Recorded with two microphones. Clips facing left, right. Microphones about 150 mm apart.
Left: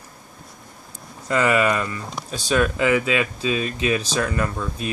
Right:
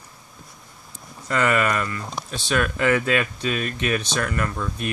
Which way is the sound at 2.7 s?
10° left (ahead or behind).